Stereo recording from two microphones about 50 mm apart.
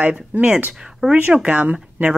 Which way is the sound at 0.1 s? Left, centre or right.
Right.